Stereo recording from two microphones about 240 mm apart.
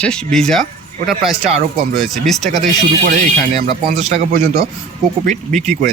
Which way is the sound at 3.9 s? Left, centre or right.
Right.